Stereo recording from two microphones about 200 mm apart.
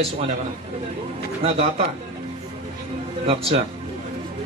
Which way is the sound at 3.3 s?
30° right (ahead or behind).